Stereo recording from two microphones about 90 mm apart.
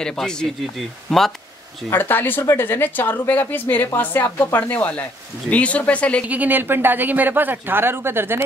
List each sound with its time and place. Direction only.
0.0 s speech: 10° left (ahead or behind)
1.9 s a woman's voice: 25° left (ahead or behind)
6.2 s speech: 20° right (ahead or behind)